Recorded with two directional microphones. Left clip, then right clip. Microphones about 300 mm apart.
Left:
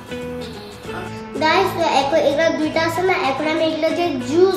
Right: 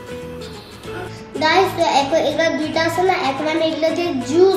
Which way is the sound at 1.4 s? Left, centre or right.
Centre.